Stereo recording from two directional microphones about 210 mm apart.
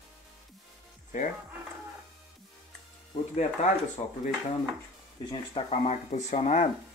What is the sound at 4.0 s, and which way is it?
Speech, 30° left (ahead or behind).